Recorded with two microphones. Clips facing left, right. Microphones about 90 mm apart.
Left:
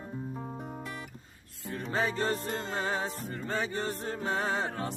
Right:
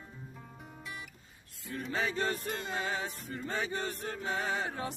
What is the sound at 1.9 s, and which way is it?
Music, 35° left (ahead or behind).